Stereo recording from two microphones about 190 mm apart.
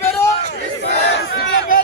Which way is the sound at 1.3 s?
65° left (ahead or behind).